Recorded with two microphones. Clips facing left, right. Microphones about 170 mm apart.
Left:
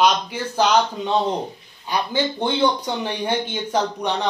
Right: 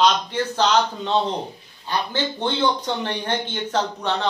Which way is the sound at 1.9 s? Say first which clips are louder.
Left 2 dB; 10° left (ahead or behind).